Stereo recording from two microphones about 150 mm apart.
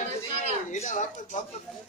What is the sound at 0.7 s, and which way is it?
Speech, 50° left (ahead or behind).